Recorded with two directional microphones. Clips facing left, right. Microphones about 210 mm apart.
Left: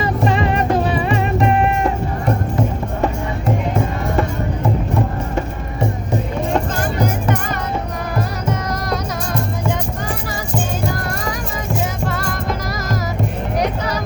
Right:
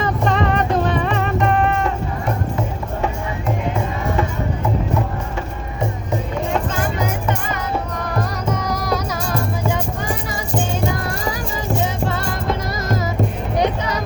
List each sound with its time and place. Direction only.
0.0 s music: 5° left (ahead or behind)
8.1 s music: centre (ahead or behind)
12.1 s music: 25° right (ahead or behind)